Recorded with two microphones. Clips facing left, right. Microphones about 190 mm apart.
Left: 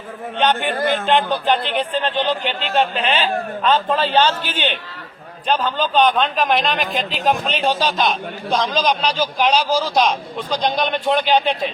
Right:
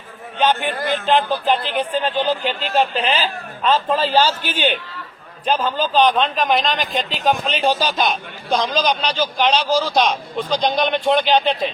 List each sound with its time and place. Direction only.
0.3 s a man's voice: 5° right (ahead or behind)
2.4 s a man's voice: 40° right (ahead or behind)
2.7 s a man's voice: centre (ahead or behind)
5.5 s a man's voice: 5° right (ahead or behind)